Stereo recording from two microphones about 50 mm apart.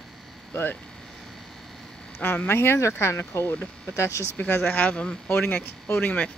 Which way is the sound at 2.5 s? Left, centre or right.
Left.